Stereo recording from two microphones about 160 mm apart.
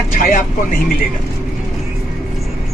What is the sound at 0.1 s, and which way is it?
Speech, 60° left (ahead or behind).